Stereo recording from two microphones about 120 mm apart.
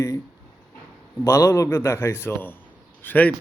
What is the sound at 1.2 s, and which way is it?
A man's voice, 25° left (ahead or behind).